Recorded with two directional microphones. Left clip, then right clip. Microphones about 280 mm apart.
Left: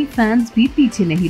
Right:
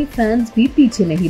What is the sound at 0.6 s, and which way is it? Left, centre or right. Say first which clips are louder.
Speech: even; left.